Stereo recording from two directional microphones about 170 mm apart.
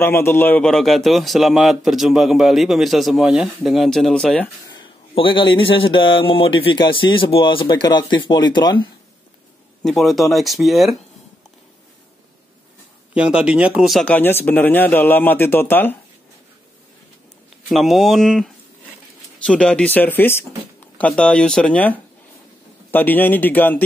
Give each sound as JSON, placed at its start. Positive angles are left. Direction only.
{"t": 0.0, "sound": "a man's voice", "side_deg": 15}
{"t": 4.6, "sound": "a man's voice", "side_deg": 30}
{"t": 9.8, "sound": "a man's voice", "side_deg": 0}
{"t": 13.1, "sound": "speech", "side_deg": -5}
{"t": 17.6, "sound": "a man's voice", "side_deg": 0}